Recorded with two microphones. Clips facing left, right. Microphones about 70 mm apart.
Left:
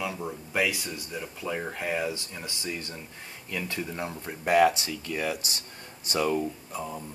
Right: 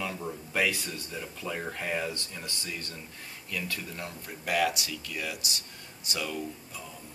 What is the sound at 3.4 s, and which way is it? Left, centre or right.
Speech, left.